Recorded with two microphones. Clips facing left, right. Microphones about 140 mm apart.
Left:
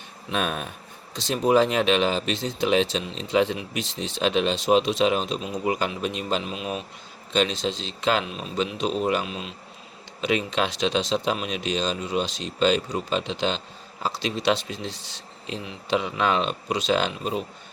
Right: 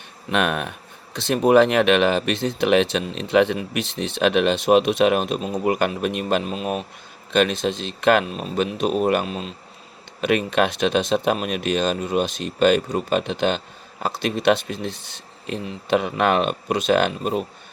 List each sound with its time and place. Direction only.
0.3 s speech: 70° right (ahead or behind); by 9.5 s 45° right (ahead or behind)
10.2 s speech: 55° right (ahead or behind)